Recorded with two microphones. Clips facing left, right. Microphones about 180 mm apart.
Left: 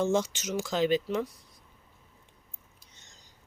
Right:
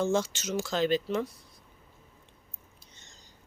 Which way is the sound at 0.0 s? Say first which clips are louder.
Left 1 dB; 15° left (ahead or behind).